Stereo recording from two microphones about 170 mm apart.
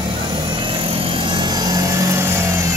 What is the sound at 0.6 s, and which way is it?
Helicopter, 30° right (ahead or behind).